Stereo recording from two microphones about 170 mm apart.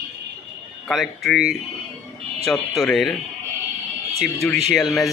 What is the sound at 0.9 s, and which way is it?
Speech, centre (ahead or behind).